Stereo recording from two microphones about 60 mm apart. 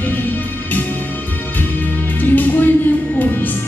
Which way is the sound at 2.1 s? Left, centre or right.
Left.